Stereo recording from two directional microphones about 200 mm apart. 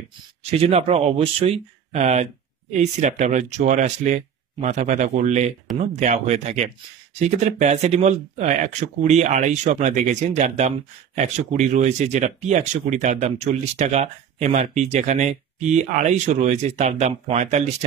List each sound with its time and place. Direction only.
0.4 s speech: 30° right (ahead or behind)